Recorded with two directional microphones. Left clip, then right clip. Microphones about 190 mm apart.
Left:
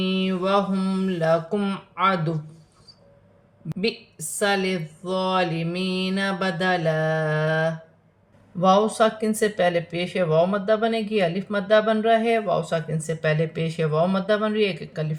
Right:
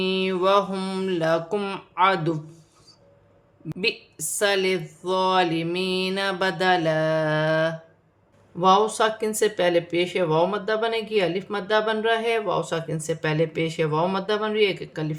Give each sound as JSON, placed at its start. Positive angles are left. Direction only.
{"t": 0.0, "sound": "speech", "side_deg": -40}
{"t": 4.4, "sound": "speech", "side_deg": -35}